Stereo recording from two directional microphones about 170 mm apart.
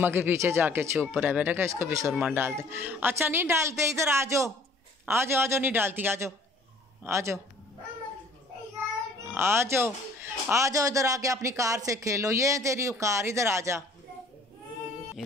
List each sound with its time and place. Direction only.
0.0 s a woman's voice: 10° right (ahead or behind)
9.3 s a man's voice: 15° right (ahead or behind)